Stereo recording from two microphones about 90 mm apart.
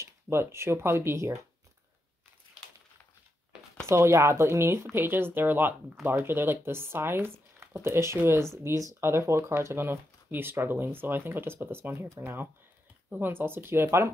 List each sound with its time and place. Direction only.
0.0 s speech: 30° right (ahead or behind)
3.8 s speech: 30° right (ahead or behind)